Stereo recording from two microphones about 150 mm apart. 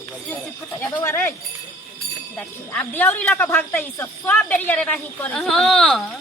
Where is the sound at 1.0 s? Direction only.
15° left (ahead or behind).